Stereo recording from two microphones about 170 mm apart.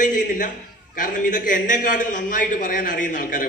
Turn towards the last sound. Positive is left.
turn(degrees=55)  # may be behind; listen again after turning